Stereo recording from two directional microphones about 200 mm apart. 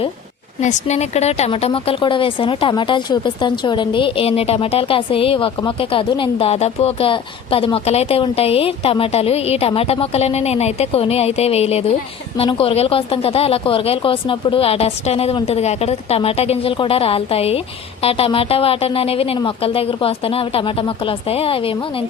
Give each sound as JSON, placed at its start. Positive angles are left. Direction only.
{"t": 0.6, "sound": "speech", "side_deg": 35}